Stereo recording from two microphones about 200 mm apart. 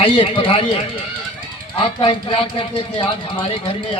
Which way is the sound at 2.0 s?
25° left (ahead or behind).